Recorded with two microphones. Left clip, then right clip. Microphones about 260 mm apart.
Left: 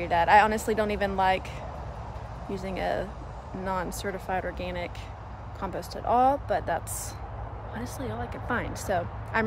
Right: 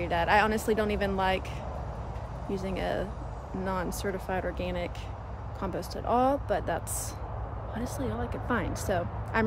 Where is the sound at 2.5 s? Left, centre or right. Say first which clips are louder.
Left 2 dB; centre.